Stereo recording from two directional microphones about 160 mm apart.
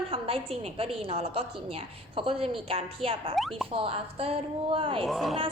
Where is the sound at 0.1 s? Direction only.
35° right (ahead or behind).